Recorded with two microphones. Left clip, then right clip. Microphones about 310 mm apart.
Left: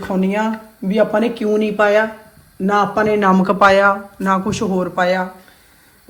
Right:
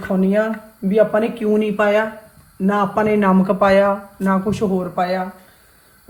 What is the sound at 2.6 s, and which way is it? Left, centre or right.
Speech, centre.